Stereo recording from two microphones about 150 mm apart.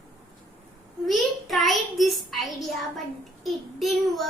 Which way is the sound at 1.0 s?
Centre (ahead or behind).